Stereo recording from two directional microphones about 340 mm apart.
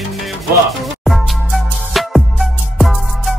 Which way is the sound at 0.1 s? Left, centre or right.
Centre.